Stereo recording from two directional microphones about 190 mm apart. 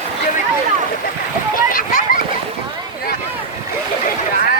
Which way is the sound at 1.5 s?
45° left (ahead or behind).